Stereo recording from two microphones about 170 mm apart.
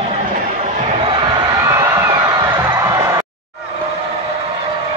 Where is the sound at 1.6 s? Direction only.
15° right (ahead or behind).